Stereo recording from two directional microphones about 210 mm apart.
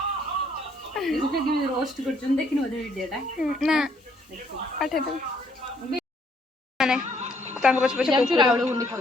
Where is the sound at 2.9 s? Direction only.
Centre (ahead or behind).